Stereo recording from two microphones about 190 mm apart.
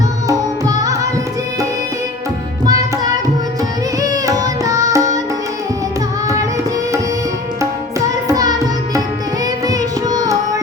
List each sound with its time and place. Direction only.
0.3 s music: 20° right (ahead or behind)
4.0 s music: 20° right (ahead or behind)
7.6 s music: 15° right (ahead or behind)